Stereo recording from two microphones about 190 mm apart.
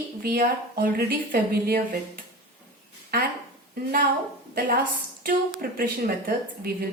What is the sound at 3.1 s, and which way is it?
Speech, 55° right (ahead or behind).